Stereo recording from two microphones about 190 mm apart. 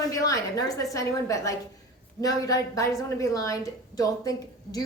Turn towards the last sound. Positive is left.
turn(degrees=20)  # may be behind; listen again after turning